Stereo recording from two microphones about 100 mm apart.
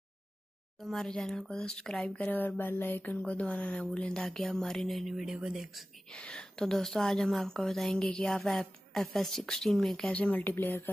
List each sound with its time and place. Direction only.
0.7 s a woman's voice: centre (ahead or behind)
2.1 s speech: 15° left (ahead or behind); by 5.9 s centre (ahead or behind)
6.1 s a woman's voice: 10° left (ahead or behind)